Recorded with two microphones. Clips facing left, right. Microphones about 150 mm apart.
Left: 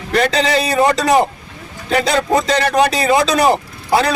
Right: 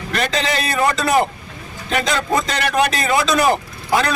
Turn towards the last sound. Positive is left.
turn(degrees=35)  # may be behind; listen again after turning